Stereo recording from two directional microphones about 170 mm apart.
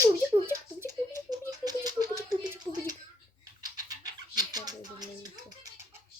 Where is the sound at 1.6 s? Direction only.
25° right (ahead or behind).